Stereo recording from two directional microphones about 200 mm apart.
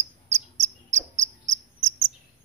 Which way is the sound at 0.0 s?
35° right (ahead or behind).